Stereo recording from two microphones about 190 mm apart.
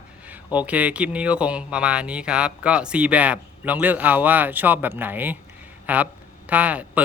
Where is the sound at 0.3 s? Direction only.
10° right (ahead or behind).